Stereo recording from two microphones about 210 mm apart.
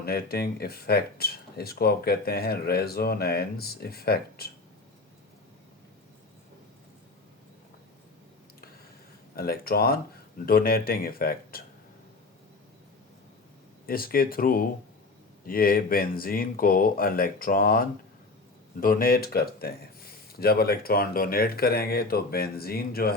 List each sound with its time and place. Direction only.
0.0 s speech: 50° left (ahead or behind)
9.3 s speech: 45° left (ahead or behind)
13.8 s speech: 45° left (ahead or behind)